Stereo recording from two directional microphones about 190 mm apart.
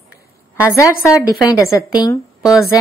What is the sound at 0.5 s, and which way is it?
A woman's voice, 15° left (ahead or behind).